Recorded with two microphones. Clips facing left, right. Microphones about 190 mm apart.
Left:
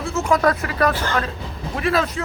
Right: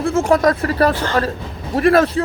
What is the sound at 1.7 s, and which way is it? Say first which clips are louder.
Speech: right 8 dB; 50° right (ahead or behind).